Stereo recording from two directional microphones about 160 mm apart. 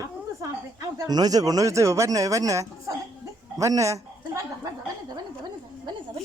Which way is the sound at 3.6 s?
20° right (ahead or behind).